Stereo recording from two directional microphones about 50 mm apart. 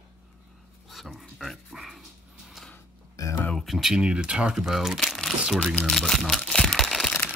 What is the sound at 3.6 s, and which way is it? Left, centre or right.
Speech, centre.